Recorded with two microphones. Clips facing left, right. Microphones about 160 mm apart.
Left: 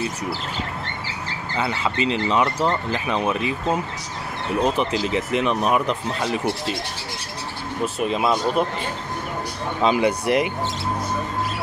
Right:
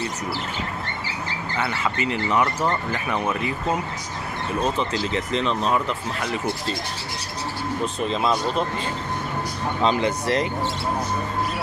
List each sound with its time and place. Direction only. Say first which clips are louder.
1.6 s speech: left 3 dB; 20° left (ahead or behind)
4.6 s speech: left 3 dB; 15° left (ahead or behind)
7.8 s speech: left 3 dB; 10° left (ahead or behind)
9.8 s speech: left 3 dB; 10° left (ahead or behind)